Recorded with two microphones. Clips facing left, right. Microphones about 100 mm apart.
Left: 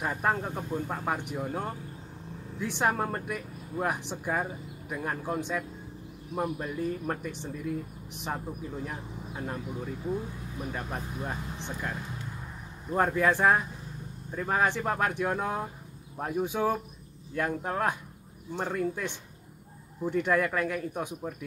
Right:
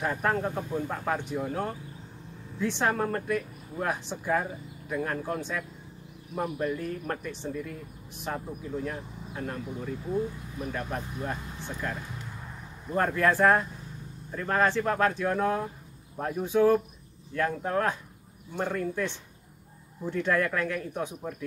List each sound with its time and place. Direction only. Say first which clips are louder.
0.0 s speech: right 1 dB; 10° left (ahead or behind)
10.7 s speech: right 3 dB; 10° left (ahead or behind)
11.5 s speech: right 1 dB; 20° left (ahead or behind)
12.9 s speech: even; 10° left (ahead or behind)